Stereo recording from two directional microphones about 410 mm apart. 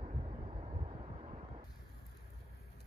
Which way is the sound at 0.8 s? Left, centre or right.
Centre.